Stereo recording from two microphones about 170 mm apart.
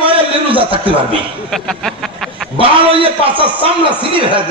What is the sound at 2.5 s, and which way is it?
A man's voice, 30° right (ahead or behind).